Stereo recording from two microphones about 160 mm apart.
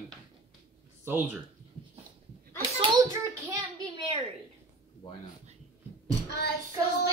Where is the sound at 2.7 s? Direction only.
30° right (ahead or behind).